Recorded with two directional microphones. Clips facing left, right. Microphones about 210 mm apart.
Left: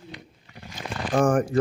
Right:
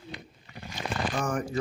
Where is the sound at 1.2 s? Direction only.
50° left (ahead or behind).